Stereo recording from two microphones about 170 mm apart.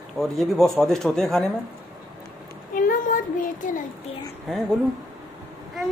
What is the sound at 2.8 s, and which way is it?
Child singing, 55° left (ahead or behind).